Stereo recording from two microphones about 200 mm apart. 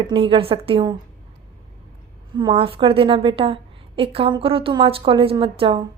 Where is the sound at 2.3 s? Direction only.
25° right (ahead or behind).